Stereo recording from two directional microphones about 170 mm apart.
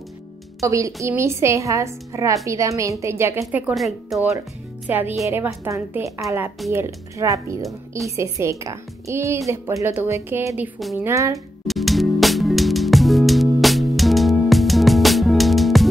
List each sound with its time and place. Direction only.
0.6 s a woman's voice: 20° right (ahead or behind)
3.7 s a woman's voice: centre (ahead or behind); by 11.3 s 15° right (ahead or behind)
11.6 s music: centre (ahead or behind)